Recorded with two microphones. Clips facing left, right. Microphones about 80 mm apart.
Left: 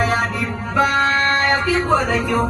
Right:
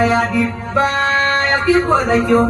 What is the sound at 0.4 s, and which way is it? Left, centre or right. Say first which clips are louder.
Speech: right 3 dB; right.